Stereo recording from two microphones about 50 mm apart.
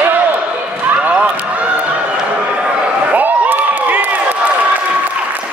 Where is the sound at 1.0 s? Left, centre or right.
Right.